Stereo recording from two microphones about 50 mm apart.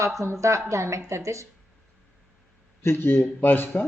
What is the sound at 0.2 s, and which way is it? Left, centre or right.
Speech, right.